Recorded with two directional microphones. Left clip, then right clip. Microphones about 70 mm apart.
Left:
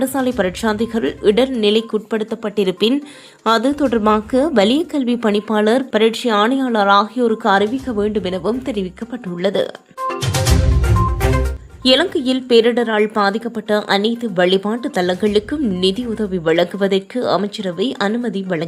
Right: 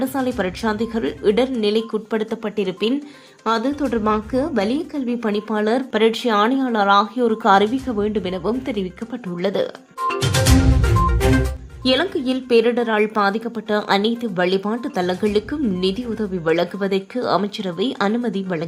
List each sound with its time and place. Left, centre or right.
0.0 s a woman's voice: left
2.6 s a woman's voice: left
6.0 s a woman's voice: centre
7.4 s a woman's voice: centre
7.9 s a woman's voice: left
11.8 s a woman's voice: left
12.8 s speech: centre
13.2 s a woman's voice: left
13.8 s a woman's voice: centre
18.1 s a woman's voice: centre